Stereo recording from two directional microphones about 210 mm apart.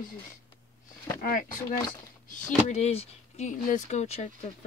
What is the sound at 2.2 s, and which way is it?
Speech, 35° left (ahead or behind).